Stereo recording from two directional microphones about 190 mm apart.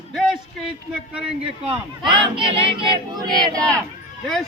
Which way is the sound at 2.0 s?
25° right (ahead or behind).